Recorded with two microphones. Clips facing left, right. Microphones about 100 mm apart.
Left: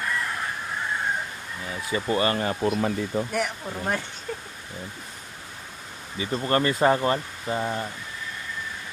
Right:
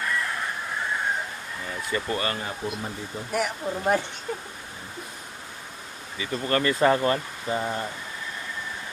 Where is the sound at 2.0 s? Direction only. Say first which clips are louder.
Left 7 dB; 25° left (ahead or behind).